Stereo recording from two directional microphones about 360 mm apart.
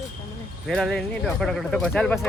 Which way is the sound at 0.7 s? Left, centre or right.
Centre.